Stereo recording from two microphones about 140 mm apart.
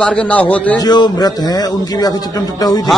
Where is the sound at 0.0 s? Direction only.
10° left (ahead or behind).